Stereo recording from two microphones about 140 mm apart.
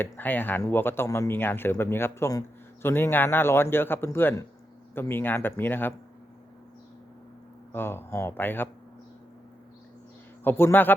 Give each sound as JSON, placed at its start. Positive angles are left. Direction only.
{"t": 0.0, "sound": "speech", "side_deg": 15}
{"t": 7.7, "sound": "speech", "side_deg": 15}
{"t": 10.4, "sound": "speech", "side_deg": 15}